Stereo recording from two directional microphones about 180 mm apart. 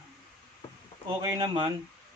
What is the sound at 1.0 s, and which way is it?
Speech, 25° right (ahead or behind).